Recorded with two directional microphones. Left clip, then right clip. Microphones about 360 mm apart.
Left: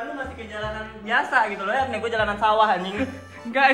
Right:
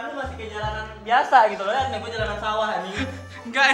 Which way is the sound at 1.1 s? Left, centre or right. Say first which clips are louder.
Right 4 dB; centre.